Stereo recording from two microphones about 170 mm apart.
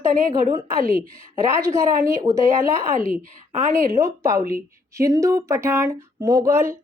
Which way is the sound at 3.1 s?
45° right (ahead or behind).